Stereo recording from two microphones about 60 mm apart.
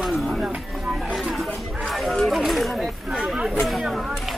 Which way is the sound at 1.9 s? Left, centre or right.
Centre.